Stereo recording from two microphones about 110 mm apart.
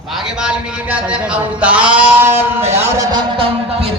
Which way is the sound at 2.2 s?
20° right (ahead or behind).